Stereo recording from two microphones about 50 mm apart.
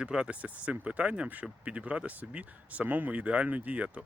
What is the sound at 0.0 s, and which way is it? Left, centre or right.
Speech, centre.